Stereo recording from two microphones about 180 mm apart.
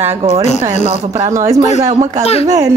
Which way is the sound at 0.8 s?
35° right (ahead or behind).